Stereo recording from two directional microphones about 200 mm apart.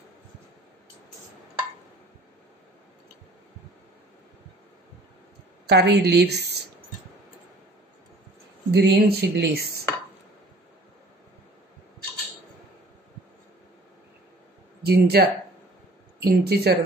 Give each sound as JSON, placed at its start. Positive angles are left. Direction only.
{"t": 5.7, "sound": "a woman's voice", "side_deg": -55}
{"t": 8.7, "sound": "a woman's voice", "side_deg": -55}
{"t": 14.9, "sound": "speech", "side_deg": -50}